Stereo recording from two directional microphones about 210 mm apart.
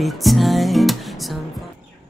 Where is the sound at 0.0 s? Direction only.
Centre (ahead or behind).